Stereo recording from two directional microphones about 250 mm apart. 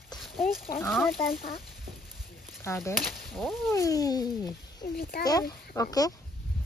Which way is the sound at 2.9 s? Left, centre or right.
Centre.